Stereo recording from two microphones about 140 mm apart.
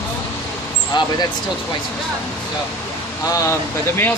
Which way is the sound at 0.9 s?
30° left (ahead or behind).